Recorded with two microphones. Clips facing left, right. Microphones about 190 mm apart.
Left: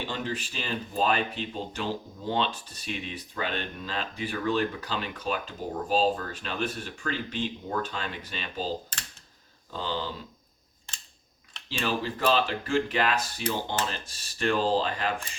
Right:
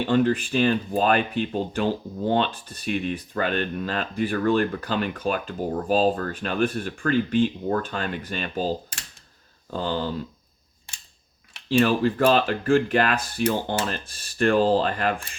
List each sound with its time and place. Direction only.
0.1 s speech: 55° right (ahead or behind)
10.9 s camera: 10° right (ahead or behind)
11.7 s speech: 50° right (ahead or behind)